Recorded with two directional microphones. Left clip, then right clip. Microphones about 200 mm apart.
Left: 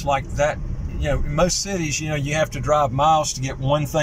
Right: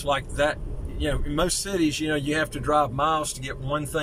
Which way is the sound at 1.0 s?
Centre (ahead or behind).